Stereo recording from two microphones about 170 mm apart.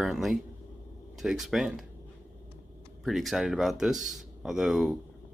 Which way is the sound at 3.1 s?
Centre (ahead or behind).